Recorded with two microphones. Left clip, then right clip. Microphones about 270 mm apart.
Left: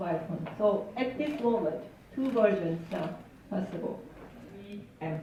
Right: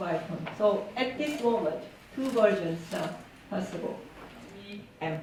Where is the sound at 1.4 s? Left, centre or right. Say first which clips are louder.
Right 1 dB; centre.